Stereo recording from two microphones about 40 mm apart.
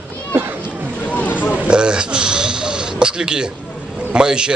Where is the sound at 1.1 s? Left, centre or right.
Left.